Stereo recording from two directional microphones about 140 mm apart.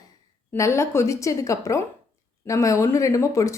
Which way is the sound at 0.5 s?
20° left (ahead or behind).